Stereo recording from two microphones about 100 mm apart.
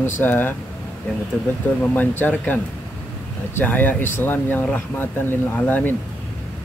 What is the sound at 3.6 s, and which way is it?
Speech, 20° left (ahead or behind).